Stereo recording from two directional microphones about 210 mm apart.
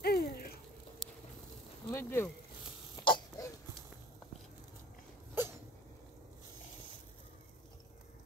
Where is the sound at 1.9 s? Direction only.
10° left (ahead or behind).